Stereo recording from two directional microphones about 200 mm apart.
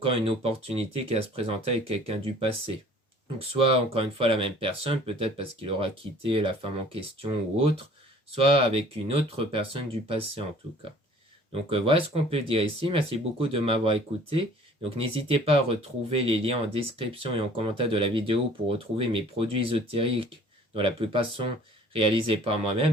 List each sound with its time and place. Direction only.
0.0 s speech: 30° right (ahead or behind)
3.9 s speech: 25° right (ahead or behind)
11.5 s speech: 30° right (ahead or behind)